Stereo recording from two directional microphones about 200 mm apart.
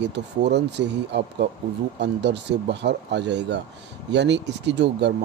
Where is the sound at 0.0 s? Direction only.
60° right (ahead or behind).